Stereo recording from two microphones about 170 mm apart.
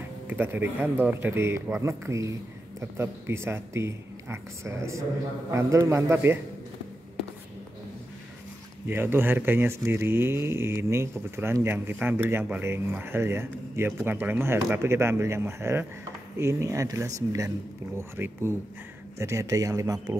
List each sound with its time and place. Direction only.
0.3 s speech: 10° right (ahead or behind)
8.8 s a man's voice: 10° right (ahead or behind)